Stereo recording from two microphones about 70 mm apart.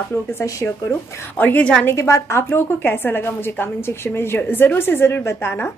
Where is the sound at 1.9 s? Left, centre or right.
Left.